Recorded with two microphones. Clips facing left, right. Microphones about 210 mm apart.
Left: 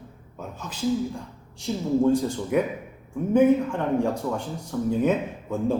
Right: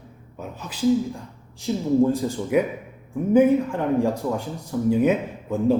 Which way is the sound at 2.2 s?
5° right (ahead or behind).